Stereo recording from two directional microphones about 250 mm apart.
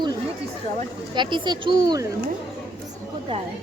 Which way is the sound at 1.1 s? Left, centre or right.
Centre.